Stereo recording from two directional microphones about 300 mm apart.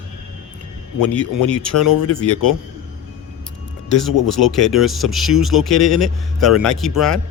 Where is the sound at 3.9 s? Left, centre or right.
Centre.